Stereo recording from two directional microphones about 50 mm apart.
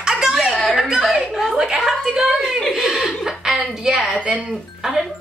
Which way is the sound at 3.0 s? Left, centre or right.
Centre.